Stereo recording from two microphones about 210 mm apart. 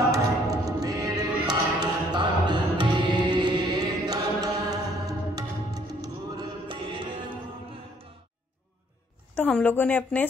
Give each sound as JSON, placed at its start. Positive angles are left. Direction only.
{"t": 0.1, "sound": "music", "side_deg": -15}
{"t": 9.3, "sound": "a woman's voice", "side_deg": 5}